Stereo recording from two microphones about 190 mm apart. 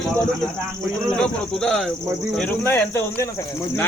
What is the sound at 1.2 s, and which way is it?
Speech, 5° left (ahead or behind).